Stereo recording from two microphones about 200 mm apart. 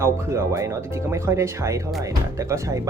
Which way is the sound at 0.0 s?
15° right (ahead or behind).